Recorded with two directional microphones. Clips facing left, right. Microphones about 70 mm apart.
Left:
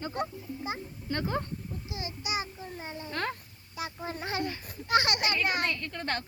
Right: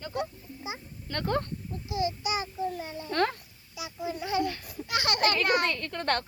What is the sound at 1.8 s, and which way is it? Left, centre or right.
A child's voice, left.